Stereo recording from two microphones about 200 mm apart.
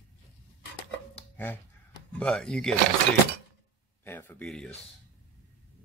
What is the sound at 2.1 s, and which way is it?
Speech, 5° left (ahead or behind).